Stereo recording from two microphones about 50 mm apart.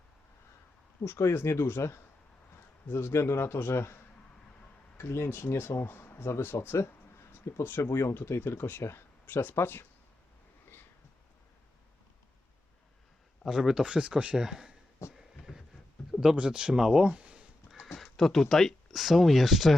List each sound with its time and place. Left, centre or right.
1.0 s speech: left
2.8 s speech: left
4.9 s speech: left
8.8 s speech: left
9.2 s speech: left
13.4 s speech: centre; by 14.3 s right
14.3 s speech: centre
15.0 s a sound: left
15.5 s a sound: centre
16.2 s speech: centre
17.9 s speech: centre